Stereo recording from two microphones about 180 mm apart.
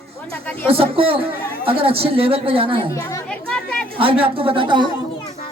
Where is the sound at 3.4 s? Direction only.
5° left (ahead or behind).